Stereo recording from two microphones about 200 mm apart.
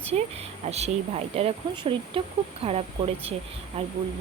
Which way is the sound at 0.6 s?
30° right (ahead or behind).